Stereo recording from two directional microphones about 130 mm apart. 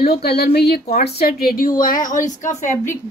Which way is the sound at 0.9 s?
90° left.